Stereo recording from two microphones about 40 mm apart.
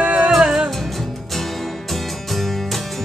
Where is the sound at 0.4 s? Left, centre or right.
Centre.